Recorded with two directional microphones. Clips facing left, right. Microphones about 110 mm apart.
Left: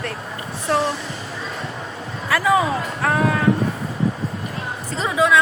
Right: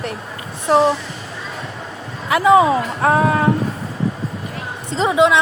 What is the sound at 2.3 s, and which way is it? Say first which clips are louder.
A woman's voice: right 6 dB; 20° right (ahead or behind).